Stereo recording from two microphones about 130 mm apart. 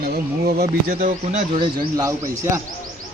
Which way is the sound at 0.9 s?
85° right.